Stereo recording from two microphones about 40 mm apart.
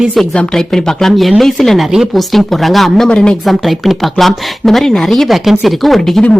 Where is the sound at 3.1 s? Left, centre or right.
Left.